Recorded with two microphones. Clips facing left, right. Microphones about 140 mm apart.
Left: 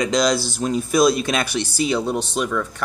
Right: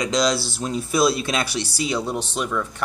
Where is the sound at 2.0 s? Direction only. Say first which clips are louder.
Left 3 dB; 80° left.